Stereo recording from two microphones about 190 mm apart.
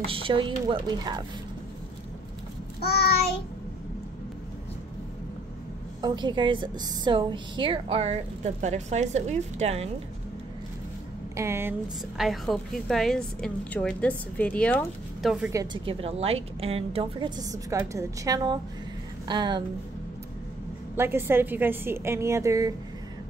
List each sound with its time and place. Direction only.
0.0 s a woman's voice: 30° right (ahead or behind)
5.9 s a woman's voice: 20° right (ahead or behind)
11.3 s a woman's voice: 15° right (ahead or behind)
12.2 s a woman's voice: centre (ahead or behind)
15.5 s a woman's voice: 20° right (ahead or behind)
20.9 s a woman's voice: 10° right (ahead or behind)